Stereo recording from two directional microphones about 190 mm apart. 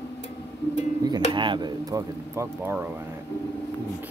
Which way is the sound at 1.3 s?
25° right (ahead or behind).